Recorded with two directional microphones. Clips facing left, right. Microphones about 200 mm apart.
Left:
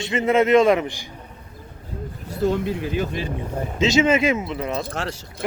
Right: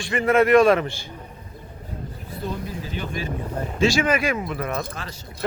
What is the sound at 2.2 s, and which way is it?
Speech, 85° left.